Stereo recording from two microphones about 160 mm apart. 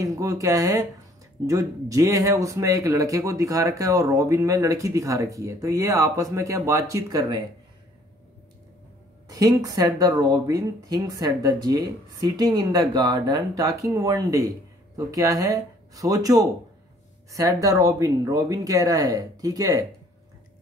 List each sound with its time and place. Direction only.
0.0 s speech: 20° right (ahead or behind)
9.3 s speech: 25° right (ahead or behind)